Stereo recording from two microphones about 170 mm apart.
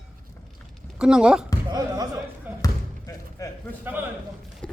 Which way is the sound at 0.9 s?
5° right (ahead or behind).